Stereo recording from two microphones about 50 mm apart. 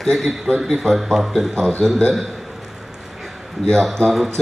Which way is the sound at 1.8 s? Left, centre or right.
Centre.